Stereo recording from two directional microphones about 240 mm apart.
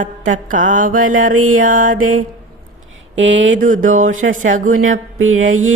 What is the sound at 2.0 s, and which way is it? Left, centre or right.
Mantra, right.